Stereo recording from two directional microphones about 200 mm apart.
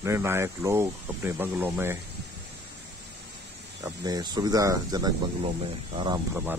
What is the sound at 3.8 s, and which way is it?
Speech, 20° right (ahead or behind).